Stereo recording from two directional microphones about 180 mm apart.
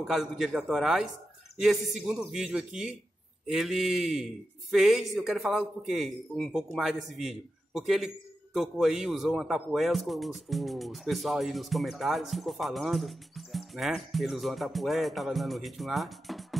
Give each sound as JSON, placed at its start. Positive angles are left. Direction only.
{"t": 0.0, "sound": "speech", "side_deg": 0}